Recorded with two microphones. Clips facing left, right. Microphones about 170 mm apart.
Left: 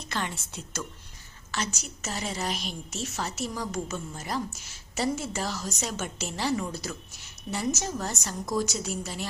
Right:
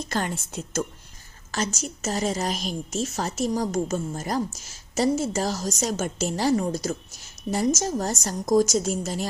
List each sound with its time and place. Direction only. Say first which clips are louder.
0.0 s a woman's voice: right 6 dB; 45° right (ahead or behind)